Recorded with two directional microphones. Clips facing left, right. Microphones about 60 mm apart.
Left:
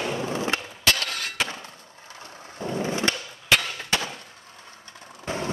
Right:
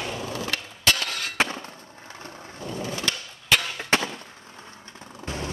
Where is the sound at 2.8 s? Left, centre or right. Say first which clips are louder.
Left 4 dB; left.